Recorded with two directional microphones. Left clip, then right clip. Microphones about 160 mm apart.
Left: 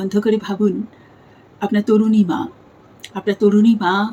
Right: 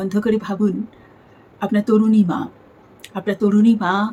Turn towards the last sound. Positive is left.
turn(degrees=-15)  # may be behind; listen again after turning